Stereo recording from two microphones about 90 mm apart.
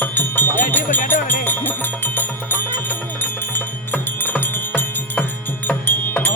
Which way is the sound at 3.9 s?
20° left (ahead or behind).